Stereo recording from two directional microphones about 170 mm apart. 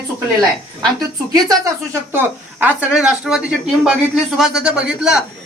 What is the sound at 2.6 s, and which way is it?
Speech, 5° right (ahead or behind).